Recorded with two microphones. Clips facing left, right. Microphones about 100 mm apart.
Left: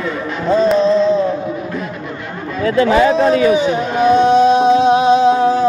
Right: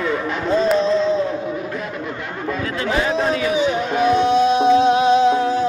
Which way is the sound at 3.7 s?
35° left (ahead or behind).